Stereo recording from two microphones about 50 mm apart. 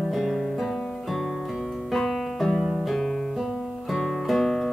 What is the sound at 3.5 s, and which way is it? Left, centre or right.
Guitar, centre.